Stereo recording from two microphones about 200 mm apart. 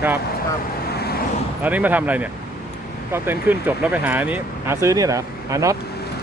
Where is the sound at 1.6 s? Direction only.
10° right (ahead or behind).